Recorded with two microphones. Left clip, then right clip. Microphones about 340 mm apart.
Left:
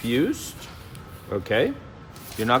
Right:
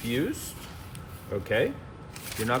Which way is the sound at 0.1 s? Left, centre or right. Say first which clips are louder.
Left 6 dB; centre.